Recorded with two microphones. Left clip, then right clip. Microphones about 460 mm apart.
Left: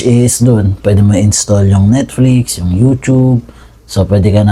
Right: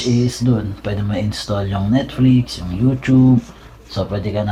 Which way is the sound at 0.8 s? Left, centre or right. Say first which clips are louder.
Left 14 dB; left.